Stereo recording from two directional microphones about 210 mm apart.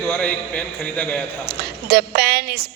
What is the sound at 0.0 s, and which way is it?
A man's voice, 5° left (ahead or behind).